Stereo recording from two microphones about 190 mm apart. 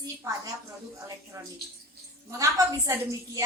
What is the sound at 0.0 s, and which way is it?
Speech, 15° right (ahead or behind).